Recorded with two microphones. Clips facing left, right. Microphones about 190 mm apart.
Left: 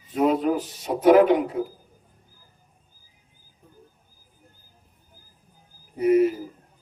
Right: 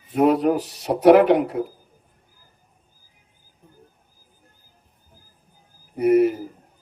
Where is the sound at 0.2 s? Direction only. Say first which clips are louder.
Right 3 dB; 65° right (ahead or behind).